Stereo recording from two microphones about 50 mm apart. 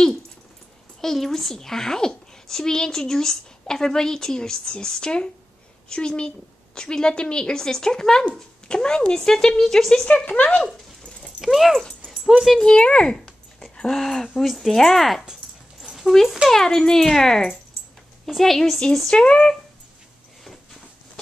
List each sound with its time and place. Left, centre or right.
1.0 s speech: centre
10.0 s speech: left
11.4 s a woman's voice: centre
12.1 s dog: centre
12.5 s speech: centre
15.8 s a sound: centre
16.4 s a woman's voice: centre